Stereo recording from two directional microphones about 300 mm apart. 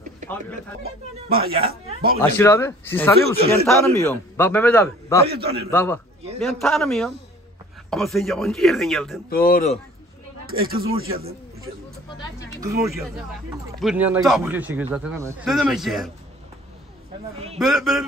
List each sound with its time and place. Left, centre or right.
1.3 s speech: right
2.2 s a man's voice: centre
9.3 s speech: left
10.4 s speech: right
12.5 s speech: centre
17.6 s speech: centre